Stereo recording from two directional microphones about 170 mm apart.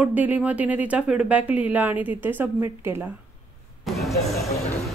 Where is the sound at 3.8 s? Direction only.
Centre (ahead or behind).